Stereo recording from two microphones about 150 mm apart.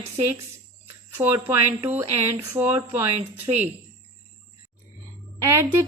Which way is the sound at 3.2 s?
50° right (ahead or behind).